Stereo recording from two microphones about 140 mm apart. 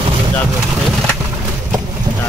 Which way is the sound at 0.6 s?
5° right (ahead or behind).